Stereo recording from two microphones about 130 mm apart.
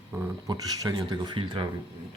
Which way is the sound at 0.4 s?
30° right (ahead or behind).